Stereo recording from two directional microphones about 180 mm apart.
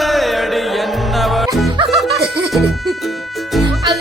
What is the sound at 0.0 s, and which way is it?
Music, centre (ahead or behind).